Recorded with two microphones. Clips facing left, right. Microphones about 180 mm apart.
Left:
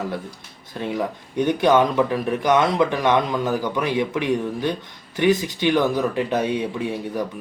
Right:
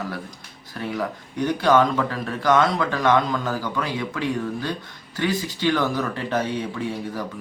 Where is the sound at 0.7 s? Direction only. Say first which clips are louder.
Left 2 dB; 20° left (ahead or behind).